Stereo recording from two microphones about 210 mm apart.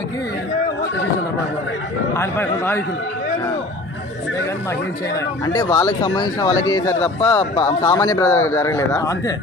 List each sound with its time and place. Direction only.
2.1 s speech: 10° left (ahead or behind)
5.5 s speech: 15° left (ahead or behind)